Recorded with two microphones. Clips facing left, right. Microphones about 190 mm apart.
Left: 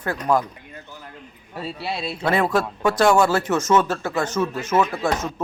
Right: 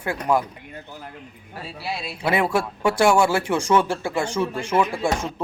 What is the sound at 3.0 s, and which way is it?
Speech, 10° right (ahead or behind).